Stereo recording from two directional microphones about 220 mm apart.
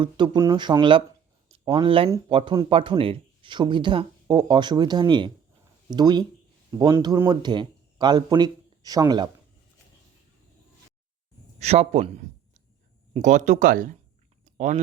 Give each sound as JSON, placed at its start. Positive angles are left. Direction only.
{"t": 0.0, "sound": "speech", "side_deg": -15}
{"t": 11.6, "sound": "speech", "side_deg": -30}